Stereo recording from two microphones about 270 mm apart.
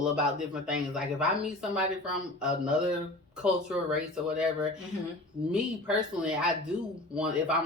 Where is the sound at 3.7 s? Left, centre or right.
Centre.